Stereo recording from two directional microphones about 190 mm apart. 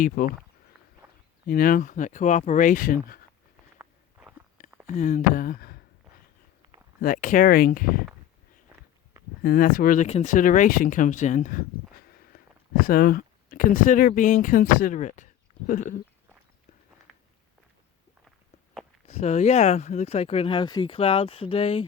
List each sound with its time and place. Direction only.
0.0 s speech: 45° left (ahead or behind)
1.0 s walk: 15° right (ahead or behind)
1.5 s speech: 50° left (ahead or behind)
3.8 s walk: 5° right (ahead or behind)
4.9 s speech: 40° left (ahead or behind)
7.0 s speech: 45° left (ahead or behind)
9.4 s speech: 50° left (ahead or behind)
18.3 s walk: centre (ahead or behind)
19.0 s speech: 35° left (ahead or behind)